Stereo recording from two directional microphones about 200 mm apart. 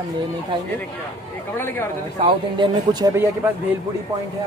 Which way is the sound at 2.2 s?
20° right (ahead or behind).